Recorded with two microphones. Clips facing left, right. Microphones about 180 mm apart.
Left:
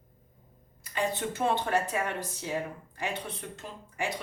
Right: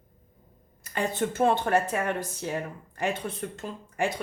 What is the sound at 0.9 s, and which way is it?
A woman's voice, 50° right (ahead or behind).